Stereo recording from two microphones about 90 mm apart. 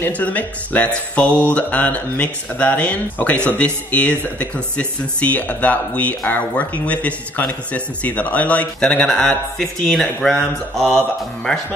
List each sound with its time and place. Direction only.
0.0 s speech: 15° left (ahead or behind)